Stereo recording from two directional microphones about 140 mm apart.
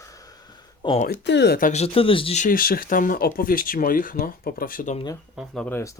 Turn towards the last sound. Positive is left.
turn(degrees=20)  # may be behind; listen again after turning